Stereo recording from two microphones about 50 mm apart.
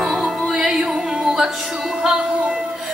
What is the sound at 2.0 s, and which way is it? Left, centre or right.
Music, centre.